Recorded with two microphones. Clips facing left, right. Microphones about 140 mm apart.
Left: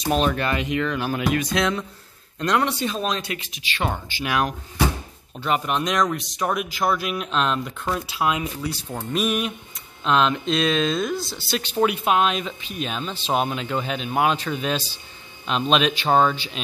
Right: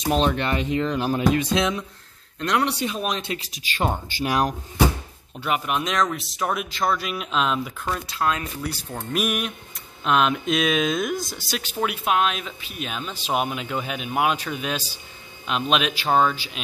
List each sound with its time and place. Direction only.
0.0 s speech: 20° right (ahead or behind)
2.7 s speech: 15° right (ahead or behind)
3.3 s speech: 40° right (ahead or behind)
5.4 s speech: 5° right (ahead or behind)
7.9 s speech: 10° left (ahead or behind)
9.1 s speech: 5° right (ahead or behind)